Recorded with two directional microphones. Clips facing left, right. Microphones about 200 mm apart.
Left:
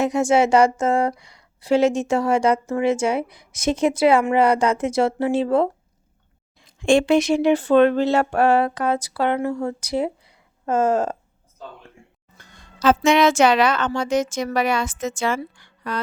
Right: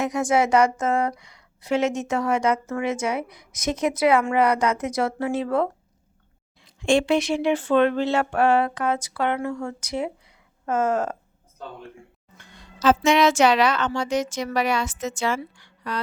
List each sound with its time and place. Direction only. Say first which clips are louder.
0.0 s a woman's voice: left 4 dB; 25° left (ahead or behind)
6.6 s speech: left 3 dB; 50° left (ahead or behind); by 11.2 s 30° left (ahead or behind)
12.4 s speech: left 2 dB; 45° left (ahead or behind)